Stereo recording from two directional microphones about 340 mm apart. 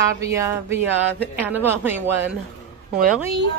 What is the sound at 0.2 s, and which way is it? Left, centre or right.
A woman's voice, centre.